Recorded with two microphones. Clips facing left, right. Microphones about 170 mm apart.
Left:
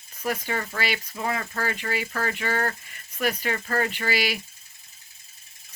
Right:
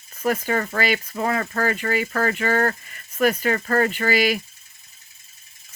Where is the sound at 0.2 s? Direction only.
50° right (ahead or behind).